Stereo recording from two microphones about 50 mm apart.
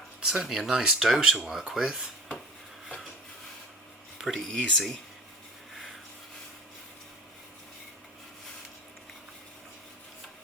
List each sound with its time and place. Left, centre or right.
0.2 s speech: centre
4.4 s speech: centre
5.7 s rub: centre